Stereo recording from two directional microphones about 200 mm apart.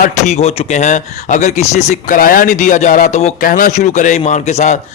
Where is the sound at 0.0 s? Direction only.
35° left (ahead or behind).